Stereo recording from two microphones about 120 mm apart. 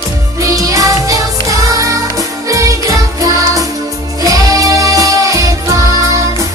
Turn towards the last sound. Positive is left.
turn(degrees=-25)  # may be behind; listen again after turning